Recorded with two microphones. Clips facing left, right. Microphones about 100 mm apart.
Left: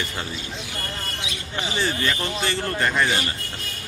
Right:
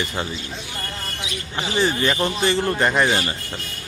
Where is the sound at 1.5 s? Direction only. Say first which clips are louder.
Right 4 dB; 20° right (ahead or behind).